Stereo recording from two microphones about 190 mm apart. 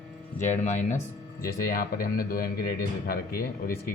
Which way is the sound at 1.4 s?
50° left (ahead or behind).